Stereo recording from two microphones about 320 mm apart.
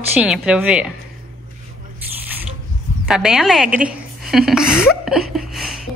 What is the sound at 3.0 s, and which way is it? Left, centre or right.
A woman's voice, centre.